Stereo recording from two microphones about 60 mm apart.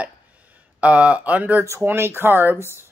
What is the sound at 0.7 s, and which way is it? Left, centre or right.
Speech, right.